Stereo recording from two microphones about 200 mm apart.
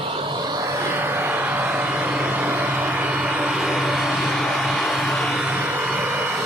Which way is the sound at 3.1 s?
5° right (ahead or behind).